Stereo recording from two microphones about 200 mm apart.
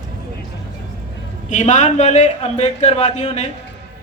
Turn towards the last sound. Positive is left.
turn(degrees=35)  # may be behind; listen again after turning